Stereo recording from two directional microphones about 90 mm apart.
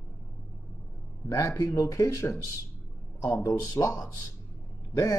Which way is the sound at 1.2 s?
35° left (ahead or behind).